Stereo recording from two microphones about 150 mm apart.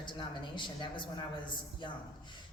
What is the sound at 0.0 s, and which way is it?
A woman's voice, 30° left (ahead or behind).